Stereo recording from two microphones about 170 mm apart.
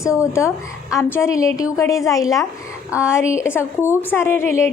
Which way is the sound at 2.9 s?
5° right (ahead or behind).